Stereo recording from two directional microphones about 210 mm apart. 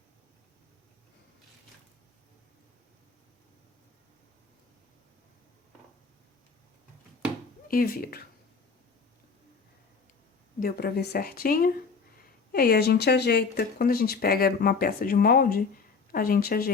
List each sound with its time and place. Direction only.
7.7 s speech: 45° left (ahead or behind)
10.6 s speech: 45° left (ahead or behind)